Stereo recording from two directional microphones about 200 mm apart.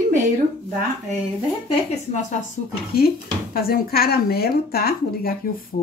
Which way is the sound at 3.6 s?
50° left (ahead or behind).